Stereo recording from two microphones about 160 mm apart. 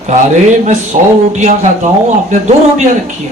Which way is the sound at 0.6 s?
50° right (ahead or behind).